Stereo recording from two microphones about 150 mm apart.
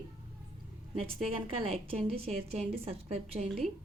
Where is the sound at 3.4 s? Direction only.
Centre (ahead or behind).